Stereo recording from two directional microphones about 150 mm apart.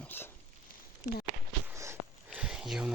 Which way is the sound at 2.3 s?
5° right (ahead or behind).